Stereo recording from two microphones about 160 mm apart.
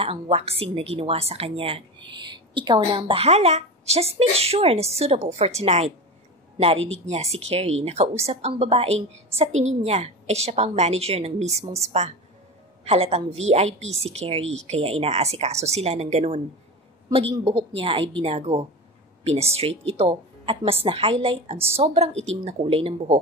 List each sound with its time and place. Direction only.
0.0 s a woman's voice: 40° right (ahead or behind)
17.3 s a woman's voice: 35° right (ahead or behind)